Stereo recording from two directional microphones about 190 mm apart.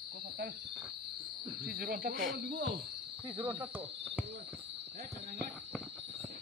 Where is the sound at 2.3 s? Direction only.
60° right (ahead or behind).